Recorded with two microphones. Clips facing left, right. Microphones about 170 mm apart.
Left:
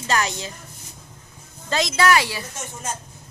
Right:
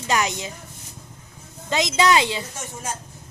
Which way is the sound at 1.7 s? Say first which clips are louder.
Even; 20° right (ahead or behind).